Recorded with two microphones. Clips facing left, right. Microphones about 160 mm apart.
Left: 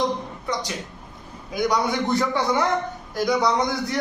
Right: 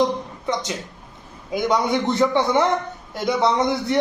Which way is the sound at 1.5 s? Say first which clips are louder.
Right 2 dB; 25° right (ahead or behind).